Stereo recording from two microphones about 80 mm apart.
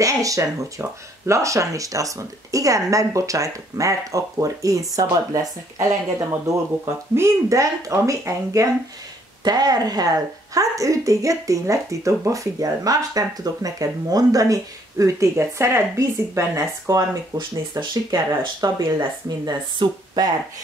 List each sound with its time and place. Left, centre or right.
0.0 s speech: right
9.4 s speech: right
17.4 s speech: right